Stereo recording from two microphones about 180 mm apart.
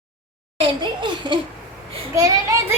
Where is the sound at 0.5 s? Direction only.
30° right (ahead or behind).